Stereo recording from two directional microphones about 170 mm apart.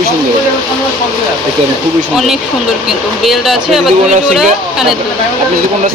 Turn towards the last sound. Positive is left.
turn(degrees=-5)  # may be behind; listen again after turning